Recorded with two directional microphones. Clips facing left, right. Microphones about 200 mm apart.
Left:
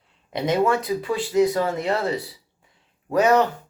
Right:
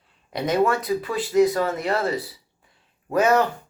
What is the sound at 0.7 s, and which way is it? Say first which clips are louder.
Speech: left 1 dB; 20° left (ahead or behind).